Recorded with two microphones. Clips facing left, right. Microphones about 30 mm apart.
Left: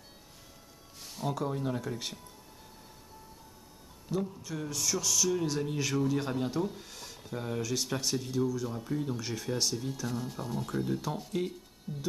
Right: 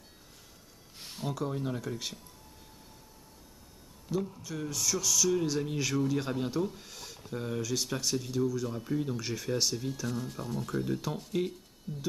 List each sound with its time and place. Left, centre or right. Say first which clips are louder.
0.9 s a sound: right 1 dB; right
1.3 s speech: left 1 dB; centre
4.1 s speech: even; centre